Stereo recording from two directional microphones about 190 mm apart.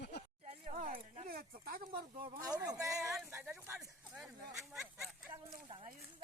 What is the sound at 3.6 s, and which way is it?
Speech, 5° right (ahead or behind).